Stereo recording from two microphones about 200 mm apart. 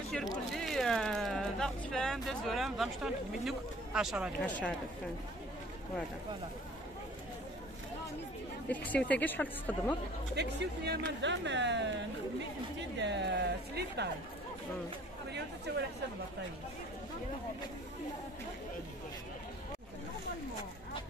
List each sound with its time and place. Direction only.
0.1 s speech: centre (ahead or behind)
8.6 s a woman's voice: 5° left (ahead or behind)
10.3 s speech: 55° right (ahead or behind)
13.0 s speech: 60° right (ahead or behind)
15.7 s speech: 55° right (ahead or behind)